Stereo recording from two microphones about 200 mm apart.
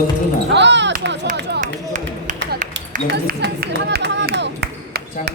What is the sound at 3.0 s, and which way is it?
Speech, 55° right (ahead or behind).